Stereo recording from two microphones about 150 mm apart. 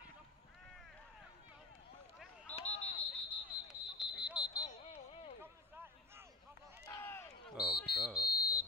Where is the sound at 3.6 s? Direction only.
5° right (ahead or behind).